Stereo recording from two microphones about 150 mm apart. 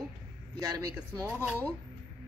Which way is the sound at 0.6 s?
25° right (ahead or behind).